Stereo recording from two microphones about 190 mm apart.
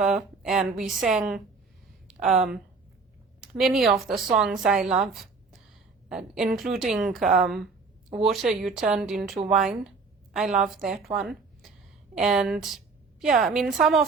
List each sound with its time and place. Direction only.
0.0 s a woman's voice: 5° right (ahead or behind)
2.2 s speech: 40° right (ahead or behind)
3.4 s a woman's voice: centre (ahead or behind)
10.6 s a woman's voice: 5° right (ahead or behind)
11.1 s a sound: centre (ahead or behind)
12.1 s a woman's voice: centre (ahead or behind)